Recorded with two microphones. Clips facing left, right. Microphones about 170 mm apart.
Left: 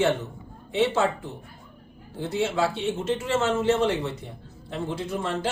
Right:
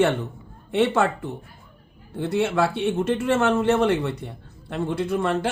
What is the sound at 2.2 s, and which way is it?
A man's voice, 60° right (ahead or behind).